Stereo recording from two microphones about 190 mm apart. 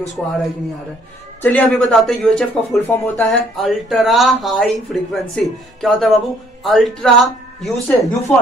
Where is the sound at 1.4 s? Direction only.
10° left (ahead or behind).